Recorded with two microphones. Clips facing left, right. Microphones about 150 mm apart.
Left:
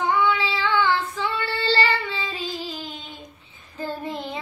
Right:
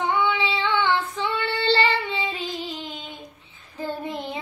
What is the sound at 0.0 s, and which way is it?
Child singing, 20° right (ahead or behind).